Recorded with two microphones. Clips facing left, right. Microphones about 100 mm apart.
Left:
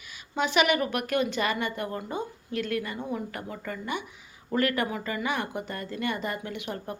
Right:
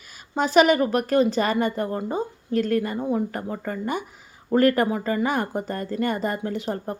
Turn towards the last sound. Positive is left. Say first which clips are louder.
# right 7 dB
turn(degrees=-35)  # may be behind; listen again after turning